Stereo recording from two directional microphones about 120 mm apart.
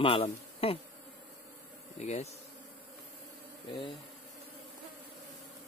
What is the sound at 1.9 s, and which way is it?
Bee, 65° left (ahead or behind).